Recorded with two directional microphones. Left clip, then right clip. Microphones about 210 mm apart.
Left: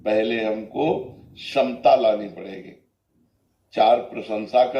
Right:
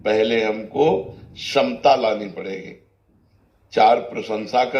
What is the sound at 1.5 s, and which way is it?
Mantra, 40° right (ahead or behind).